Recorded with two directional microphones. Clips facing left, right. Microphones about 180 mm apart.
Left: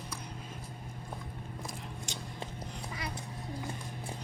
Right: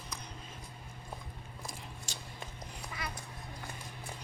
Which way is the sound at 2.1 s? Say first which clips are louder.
Left 5 dB; 20° left (ahead or behind).